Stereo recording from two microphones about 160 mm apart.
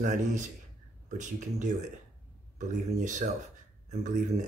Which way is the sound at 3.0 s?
50° right (ahead or behind).